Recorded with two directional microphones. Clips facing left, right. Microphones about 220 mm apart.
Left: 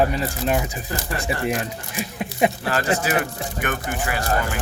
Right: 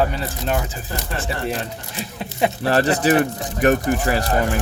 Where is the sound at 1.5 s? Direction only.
15° left (ahead or behind).